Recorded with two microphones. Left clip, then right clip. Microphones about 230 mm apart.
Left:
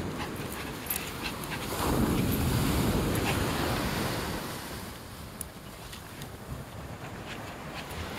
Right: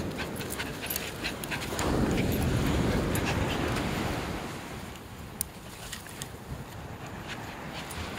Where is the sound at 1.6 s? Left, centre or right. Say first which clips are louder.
Even; left.